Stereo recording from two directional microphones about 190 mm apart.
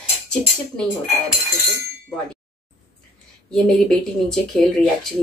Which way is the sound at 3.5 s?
5° left (ahead or behind).